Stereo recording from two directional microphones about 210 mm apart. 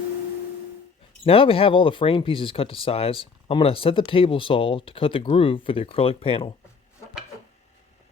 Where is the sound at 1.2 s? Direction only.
25° left (ahead or behind).